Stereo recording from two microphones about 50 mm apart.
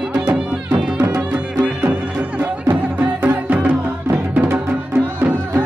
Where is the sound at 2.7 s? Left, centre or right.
Right.